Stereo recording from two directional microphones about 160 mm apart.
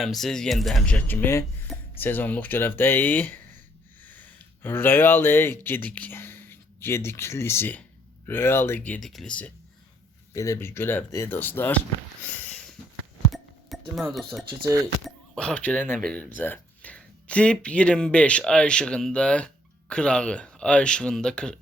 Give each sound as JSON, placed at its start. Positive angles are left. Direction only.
{"t": 0.0, "sound": "speech", "side_deg": 0}
{"t": 10.3, "sound": "speech", "side_deg": 20}
{"t": 13.7, "sound": "music", "side_deg": 0}
{"t": 14.1, "sound": "speech", "side_deg": 0}
{"t": 14.6, "sound": "speech", "side_deg": -20}
{"t": 15.0, "sound": "speech", "side_deg": 5}